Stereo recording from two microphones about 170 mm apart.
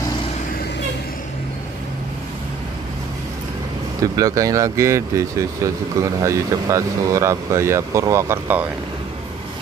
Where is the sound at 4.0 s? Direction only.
20° right (ahead or behind).